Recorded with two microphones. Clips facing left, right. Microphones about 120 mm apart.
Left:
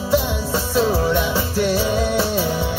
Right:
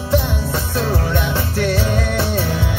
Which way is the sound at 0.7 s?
5° left (ahead or behind).